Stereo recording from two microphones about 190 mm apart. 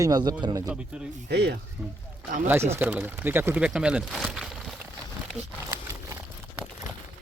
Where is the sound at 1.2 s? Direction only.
60° right (ahead or behind).